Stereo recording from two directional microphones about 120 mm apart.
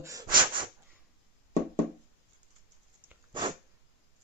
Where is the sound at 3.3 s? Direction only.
40° right (ahead or behind).